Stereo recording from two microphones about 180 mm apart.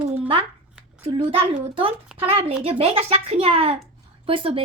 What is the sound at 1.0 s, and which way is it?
A woman's voice, 30° right (ahead or behind).